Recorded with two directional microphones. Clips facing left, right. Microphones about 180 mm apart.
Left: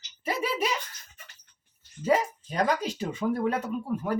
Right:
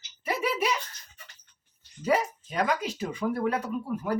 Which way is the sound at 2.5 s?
35° left (ahead or behind).